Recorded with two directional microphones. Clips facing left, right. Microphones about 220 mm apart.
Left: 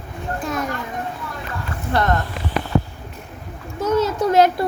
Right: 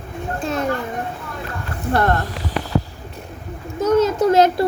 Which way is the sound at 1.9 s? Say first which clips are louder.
Right 2 dB; 50° right (ahead or behind).